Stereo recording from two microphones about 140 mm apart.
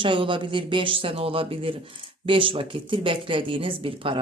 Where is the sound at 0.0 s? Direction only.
35° right (ahead or behind).